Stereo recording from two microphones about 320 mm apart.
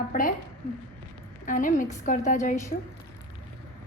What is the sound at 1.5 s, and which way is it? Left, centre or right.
A woman's voice, left.